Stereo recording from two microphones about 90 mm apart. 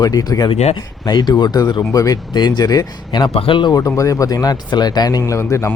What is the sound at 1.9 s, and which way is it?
Speech, 40° left (ahead or behind).